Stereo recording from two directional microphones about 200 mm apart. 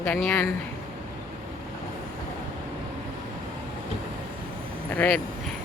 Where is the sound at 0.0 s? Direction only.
10° left (ahead or behind).